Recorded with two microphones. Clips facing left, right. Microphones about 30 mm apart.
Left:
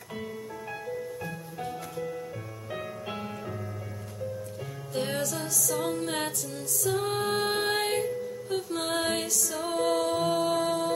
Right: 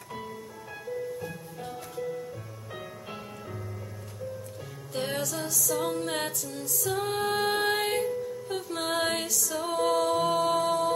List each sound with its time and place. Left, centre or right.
1.2 s music: centre
4.9 s music: centre